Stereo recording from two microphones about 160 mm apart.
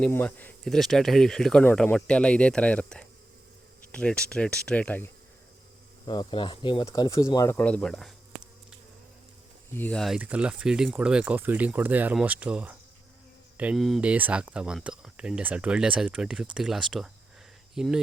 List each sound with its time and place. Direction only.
0.0 s speech: 10° left (ahead or behind)
6.1 s speech: 30° left (ahead or behind); by 8.1 s centre (ahead or behind)
9.7 s speech: 10° left (ahead or behind)
10.2 s speech: 10° right (ahead or behind)